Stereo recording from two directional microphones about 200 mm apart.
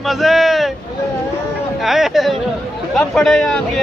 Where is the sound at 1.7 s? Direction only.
Centre (ahead or behind).